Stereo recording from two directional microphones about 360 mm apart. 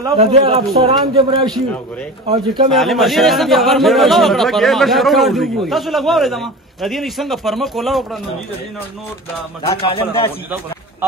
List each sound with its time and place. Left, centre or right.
0.0 s speech: centre
2.7 s a man's voice: centre
9.6 s a man's voice: centre